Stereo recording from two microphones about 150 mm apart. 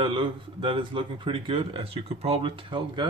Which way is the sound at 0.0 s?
35° right (ahead or behind).